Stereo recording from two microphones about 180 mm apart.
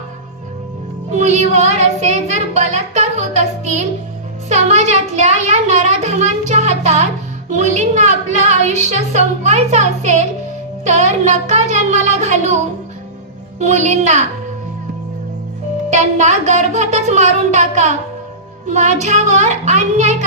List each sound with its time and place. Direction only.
1.1 s child singing: 40° right (ahead or behind)
4.5 s a woman's voice: 40° right (ahead or behind)
13.6 s a woman's voice: 40° right (ahead or behind)
15.9 s a woman's voice: 40° right (ahead or behind)